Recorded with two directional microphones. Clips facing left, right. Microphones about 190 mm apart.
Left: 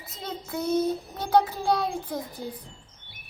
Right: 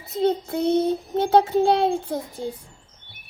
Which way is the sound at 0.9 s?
25° right (ahead or behind).